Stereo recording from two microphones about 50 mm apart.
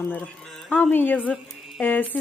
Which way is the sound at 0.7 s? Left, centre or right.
Left.